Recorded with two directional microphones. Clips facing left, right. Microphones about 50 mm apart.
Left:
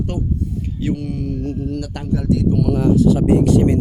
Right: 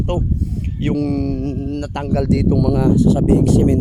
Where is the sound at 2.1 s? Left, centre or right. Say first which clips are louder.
Right 2 dB; right.